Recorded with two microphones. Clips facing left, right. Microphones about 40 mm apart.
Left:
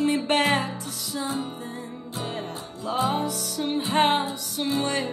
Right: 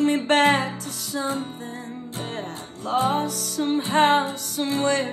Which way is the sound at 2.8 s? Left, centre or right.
Right.